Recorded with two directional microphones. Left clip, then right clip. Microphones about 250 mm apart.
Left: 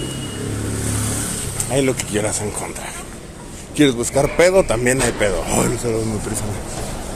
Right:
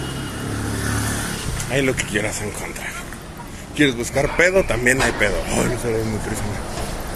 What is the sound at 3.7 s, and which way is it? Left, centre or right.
A man's voice, left.